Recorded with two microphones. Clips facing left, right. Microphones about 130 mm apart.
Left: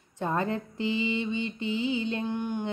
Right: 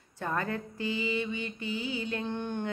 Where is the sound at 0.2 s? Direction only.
20° left (ahead or behind).